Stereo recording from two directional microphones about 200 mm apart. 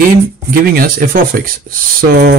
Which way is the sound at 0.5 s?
45° right (ahead or behind).